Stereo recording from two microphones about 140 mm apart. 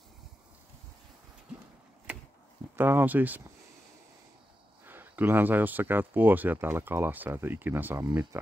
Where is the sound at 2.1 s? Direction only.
10° right (ahead or behind).